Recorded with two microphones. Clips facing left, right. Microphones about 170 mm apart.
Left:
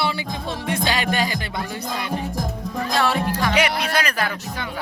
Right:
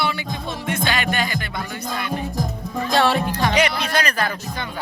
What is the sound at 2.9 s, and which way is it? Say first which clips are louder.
Music: right 3 dB; 30° right (ahead or behind).